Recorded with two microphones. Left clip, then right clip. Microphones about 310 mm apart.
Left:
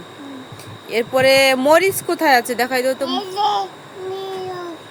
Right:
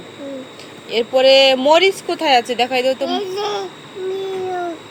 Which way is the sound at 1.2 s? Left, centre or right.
Left.